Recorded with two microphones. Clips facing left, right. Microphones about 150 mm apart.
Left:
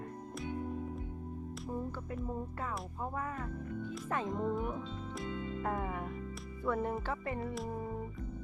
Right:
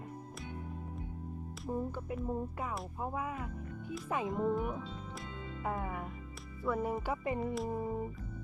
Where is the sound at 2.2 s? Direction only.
10° right (ahead or behind).